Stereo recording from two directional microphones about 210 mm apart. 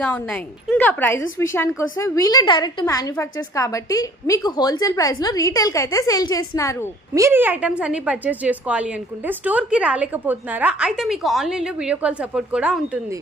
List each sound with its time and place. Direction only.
0.0 s a woman's voice: 5° left (ahead or behind)
7.1 s a woman's voice: 10° right (ahead or behind)